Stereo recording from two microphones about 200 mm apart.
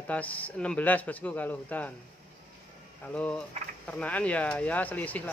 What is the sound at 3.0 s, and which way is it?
Speech, 5° left (ahead or behind).